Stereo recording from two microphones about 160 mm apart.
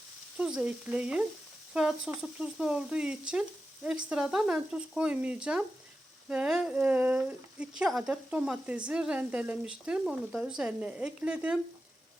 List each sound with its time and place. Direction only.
0.3 s speech: 5° right (ahead or behind)